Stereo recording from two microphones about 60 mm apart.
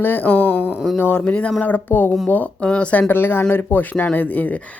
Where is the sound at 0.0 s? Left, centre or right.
Left.